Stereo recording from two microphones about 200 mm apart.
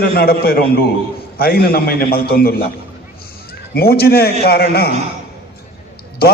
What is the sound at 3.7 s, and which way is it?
A man's voice, 50° left (ahead or behind).